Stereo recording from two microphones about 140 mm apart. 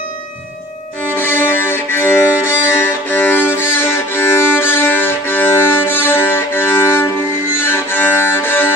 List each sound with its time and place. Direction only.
1.1 s violin: 15° left (ahead or behind)